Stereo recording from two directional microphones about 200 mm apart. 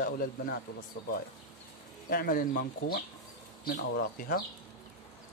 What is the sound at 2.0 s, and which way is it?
Speech, 50° left (ahead or behind).